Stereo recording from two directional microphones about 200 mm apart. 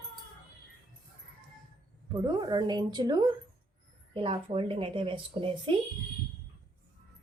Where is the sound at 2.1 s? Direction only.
20° right (ahead or behind).